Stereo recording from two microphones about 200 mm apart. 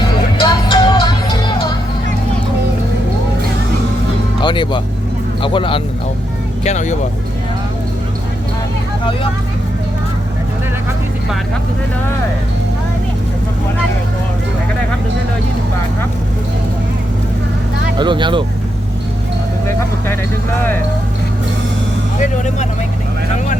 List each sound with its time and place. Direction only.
0.3 s music: 25° left (ahead or behind)
4.4 s music: 25° left (ahead or behind)
5.4 s speech: 25° left (ahead or behind)
6.7 s speech: 35° left (ahead or behind)
17.9 s speech: 25° right (ahead or behind)
22.2 s speech: 35° left (ahead or behind)